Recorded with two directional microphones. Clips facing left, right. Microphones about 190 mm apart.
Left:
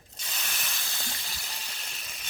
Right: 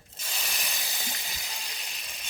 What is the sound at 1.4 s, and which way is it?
Frying, centre (ahead or behind).